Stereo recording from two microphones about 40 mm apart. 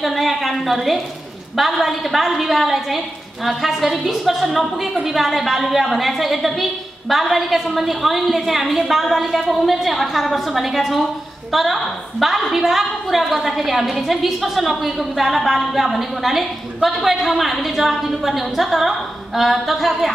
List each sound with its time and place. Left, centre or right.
0.0 s a woman's voice: centre